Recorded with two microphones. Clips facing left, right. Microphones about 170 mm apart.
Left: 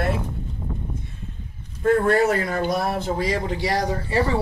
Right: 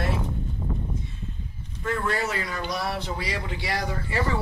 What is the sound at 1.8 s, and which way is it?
Speech, 55° left (ahead or behind).